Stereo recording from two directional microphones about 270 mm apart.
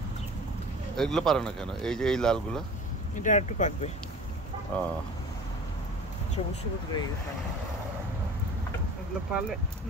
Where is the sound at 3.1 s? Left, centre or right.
Left.